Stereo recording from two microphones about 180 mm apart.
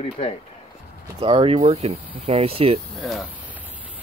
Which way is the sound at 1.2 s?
30° right (ahead or behind).